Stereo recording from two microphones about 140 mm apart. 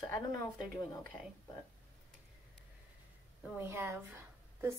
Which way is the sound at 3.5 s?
15° right (ahead or behind).